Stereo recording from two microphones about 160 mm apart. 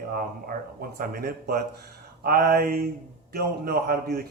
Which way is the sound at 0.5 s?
60° right (ahead or behind).